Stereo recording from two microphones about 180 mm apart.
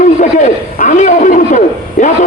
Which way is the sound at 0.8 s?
45° left (ahead or behind).